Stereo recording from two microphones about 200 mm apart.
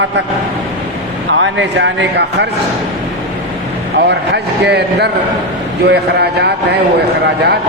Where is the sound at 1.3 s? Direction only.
65° right (ahead or behind).